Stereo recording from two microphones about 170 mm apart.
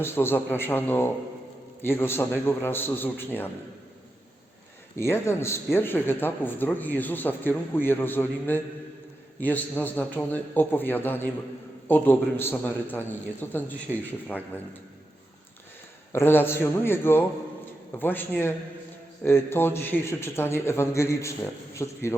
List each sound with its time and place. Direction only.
0.0 s a man's voice: 15° left (ahead or behind)
4.9 s a man's voice: 15° left (ahead or behind)
16.1 s a man's voice: 15° left (ahead or behind)